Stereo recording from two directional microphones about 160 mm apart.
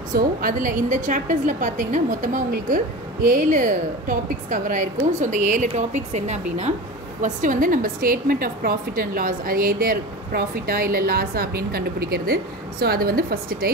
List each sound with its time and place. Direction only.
0.1 s a woman's voice: 60° right (ahead or behind)